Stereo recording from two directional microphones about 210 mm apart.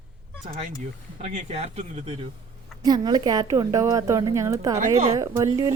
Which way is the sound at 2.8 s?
20° right (ahead or behind).